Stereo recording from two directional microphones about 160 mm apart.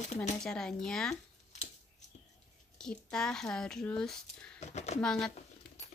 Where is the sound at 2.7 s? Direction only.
5° left (ahead or behind).